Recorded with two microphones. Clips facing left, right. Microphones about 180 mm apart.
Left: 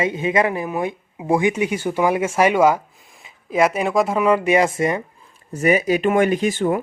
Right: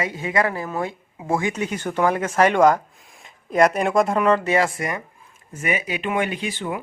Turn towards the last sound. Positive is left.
turn(degrees=45)  # may be behind; listen again after turning